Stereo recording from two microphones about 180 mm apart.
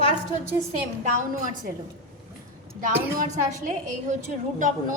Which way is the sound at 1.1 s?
45° right (ahead or behind).